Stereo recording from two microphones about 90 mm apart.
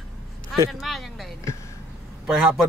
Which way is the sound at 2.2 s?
5° right (ahead or behind).